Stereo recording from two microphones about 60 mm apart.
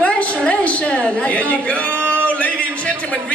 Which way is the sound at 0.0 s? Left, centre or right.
Left.